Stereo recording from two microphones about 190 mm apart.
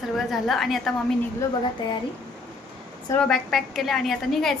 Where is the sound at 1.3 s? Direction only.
25° left (ahead or behind).